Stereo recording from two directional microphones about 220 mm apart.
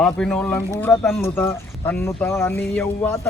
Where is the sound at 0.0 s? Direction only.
5° left (ahead or behind).